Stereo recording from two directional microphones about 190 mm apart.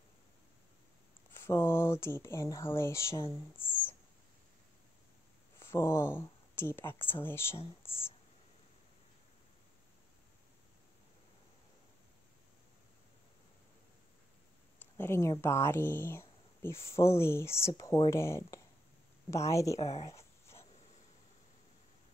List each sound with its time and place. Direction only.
1.3 s speech: 10° left (ahead or behind)
5.6 s speech: 15° left (ahead or behind)
7.8 s a sound: 15° left (ahead or behind)
15.0 s speech: 15° left (ahead or behind)
19.8 s speech: 35° left (ahead or behind)
20.2 s dog: 15° left (ahead or behind)